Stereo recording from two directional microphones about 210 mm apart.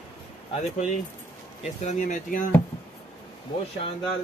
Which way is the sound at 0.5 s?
30° left (ahead or behind).